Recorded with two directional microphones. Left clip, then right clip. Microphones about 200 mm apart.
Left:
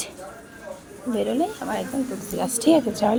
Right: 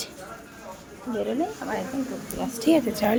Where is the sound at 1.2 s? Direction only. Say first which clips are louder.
Left 3 dB; 45° left (ahead or behind).